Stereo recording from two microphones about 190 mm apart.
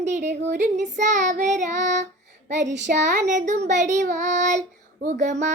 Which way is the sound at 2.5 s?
40° right (ahead or behind).